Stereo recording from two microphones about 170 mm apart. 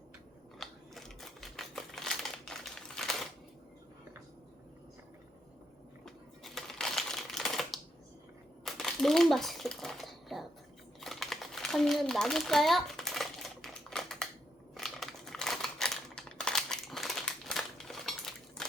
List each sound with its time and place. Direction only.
0.6 s typewriter: centre (ahead or behind)
6.4 s typewriter: centre (ahead or behind)
8.6 s crumpling: centre (ahead or behind)
14.8 s a sound: centre (ahead or behind)